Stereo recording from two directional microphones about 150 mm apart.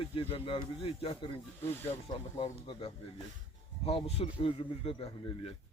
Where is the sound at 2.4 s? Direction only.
35° left (ahead or behind).